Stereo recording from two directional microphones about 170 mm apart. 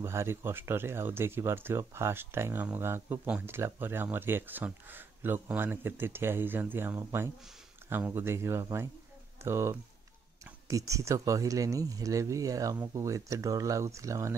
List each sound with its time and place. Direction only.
0.0 s speech: 15° right (ahead or behind)